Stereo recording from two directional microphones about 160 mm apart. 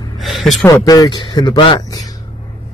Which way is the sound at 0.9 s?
25° left (ahead or behind).